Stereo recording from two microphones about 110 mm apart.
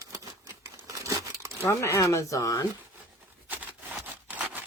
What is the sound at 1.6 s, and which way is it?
Speech, 25° left (ahead or behind).